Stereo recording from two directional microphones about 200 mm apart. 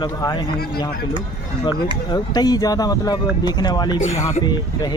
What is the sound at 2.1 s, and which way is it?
Speech, 20° left (ahead or behind).